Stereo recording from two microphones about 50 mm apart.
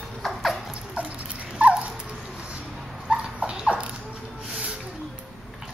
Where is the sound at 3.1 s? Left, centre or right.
Right.